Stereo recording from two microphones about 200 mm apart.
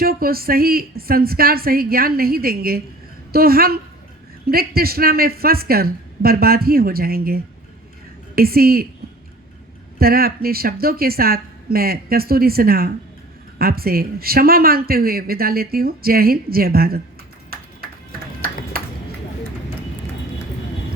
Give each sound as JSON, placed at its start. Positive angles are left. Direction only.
{"t": 0.0, "sound": "speech", "side_deg": -50}
{"t": 10.0, "sound": "speech", "side_deg": -50}